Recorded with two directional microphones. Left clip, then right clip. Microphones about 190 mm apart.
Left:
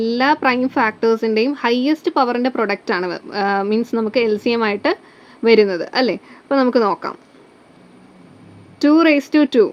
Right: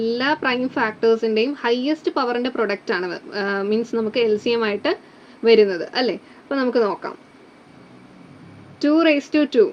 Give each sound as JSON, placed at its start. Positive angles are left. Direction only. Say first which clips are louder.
{"t": 0.0, "sound": "speech", "louder": "left 5 dB", "side_deg": 40}
{"t": 8.8, "sound": "speech", "louder": "left 4 dB", "side_deg": 40}